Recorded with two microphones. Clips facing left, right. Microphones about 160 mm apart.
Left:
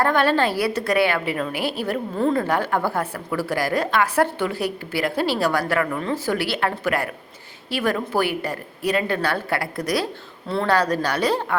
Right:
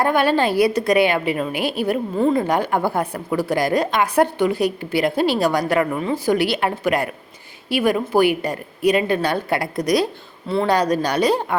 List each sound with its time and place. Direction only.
0.0 s a woman's voice: 15° right (ahead or behind)